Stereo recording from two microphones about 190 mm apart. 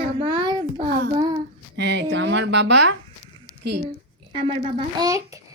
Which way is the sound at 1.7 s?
65° right (ahead or behind).